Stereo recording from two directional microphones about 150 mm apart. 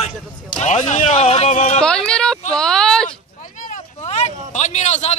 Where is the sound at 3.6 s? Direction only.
50° left (ahead or behind).